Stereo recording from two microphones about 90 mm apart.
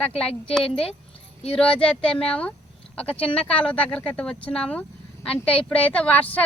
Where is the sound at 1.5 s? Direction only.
10° left (ahead or behind).